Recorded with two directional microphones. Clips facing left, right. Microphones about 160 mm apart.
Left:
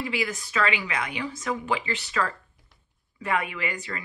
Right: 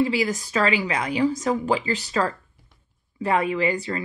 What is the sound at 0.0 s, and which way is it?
Speech, 35° right (ahead or behind).